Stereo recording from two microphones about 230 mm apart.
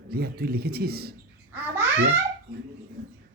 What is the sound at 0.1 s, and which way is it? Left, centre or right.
Speech, right.